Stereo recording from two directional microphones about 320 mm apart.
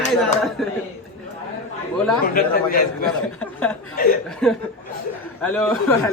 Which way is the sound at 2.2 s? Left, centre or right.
Left.